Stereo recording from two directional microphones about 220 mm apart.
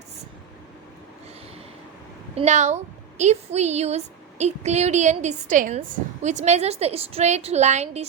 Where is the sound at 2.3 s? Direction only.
30° right (ahead or behind).